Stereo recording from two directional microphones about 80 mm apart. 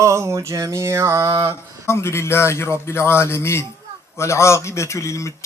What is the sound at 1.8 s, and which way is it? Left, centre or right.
Speech, left.